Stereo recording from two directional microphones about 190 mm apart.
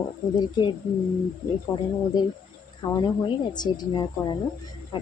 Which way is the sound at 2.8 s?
20° left (ahead or behind).